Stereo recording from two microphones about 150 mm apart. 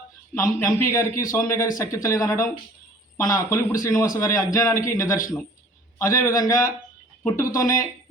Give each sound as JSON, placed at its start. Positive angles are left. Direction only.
{"t": 0.3, "sound": "a man's voice", "side_deg": 20}